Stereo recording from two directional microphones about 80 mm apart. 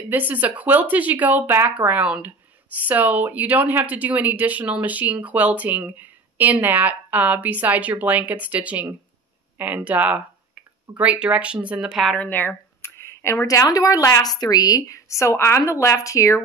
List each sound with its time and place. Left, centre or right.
0.1 s speech: right; by 12.1 s centre
12.2 s speech: left